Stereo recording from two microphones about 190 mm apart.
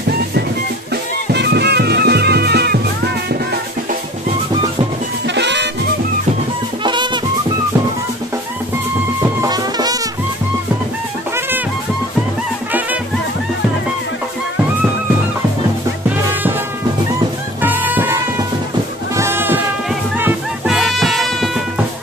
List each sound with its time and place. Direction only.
1.3 s music: 60° right (ahead or behind)
5.3 s music: 65° right (ahead or behind)
6.8 s music: 25° right (ahead or behind)
9.2 s music: 20° right (ahead or behind)
17.6 s music: 10° right (ahead or behind)